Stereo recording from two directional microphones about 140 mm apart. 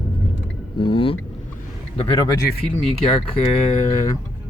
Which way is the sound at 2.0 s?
35° left (ahead or behind).